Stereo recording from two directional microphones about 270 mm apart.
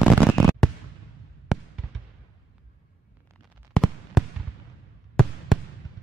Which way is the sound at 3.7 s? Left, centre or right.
Centre.